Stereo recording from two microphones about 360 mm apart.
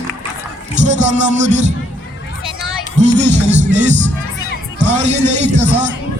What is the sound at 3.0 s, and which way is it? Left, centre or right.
Music, centre.